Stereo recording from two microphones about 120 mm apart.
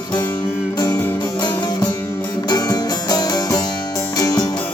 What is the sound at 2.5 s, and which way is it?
Music, 35° left (ahead or behind).